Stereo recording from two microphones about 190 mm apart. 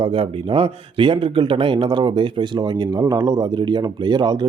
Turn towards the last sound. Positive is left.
turn(degrees=-20)  # may be behind; listen again after turning